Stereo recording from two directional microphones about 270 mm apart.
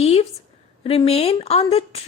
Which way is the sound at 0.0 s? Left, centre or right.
Left.